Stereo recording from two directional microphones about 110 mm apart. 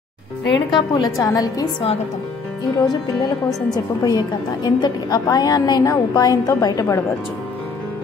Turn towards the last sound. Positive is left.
turn(degrees=35)  # may be behind; listen again after turning